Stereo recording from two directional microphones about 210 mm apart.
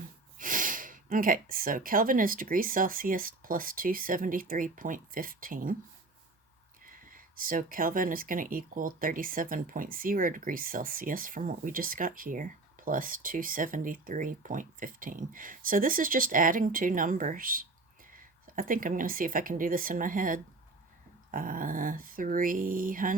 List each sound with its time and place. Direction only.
0.3 s speech: 40° right (ahead or behind)
6.8 s speech: 40° right (ahead or behind)